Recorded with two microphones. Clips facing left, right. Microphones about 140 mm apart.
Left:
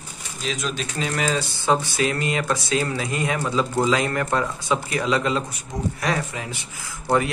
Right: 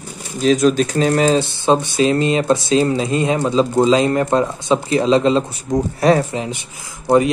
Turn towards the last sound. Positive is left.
turn(degrees=-15)  # may be behind; listen again after turning